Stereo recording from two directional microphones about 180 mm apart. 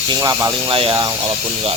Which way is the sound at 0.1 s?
20° right (ahead or behind).